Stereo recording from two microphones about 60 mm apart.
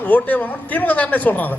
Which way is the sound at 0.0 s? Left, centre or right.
Left.